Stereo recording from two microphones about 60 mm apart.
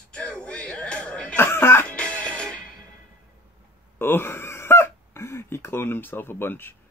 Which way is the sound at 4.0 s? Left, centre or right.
Left.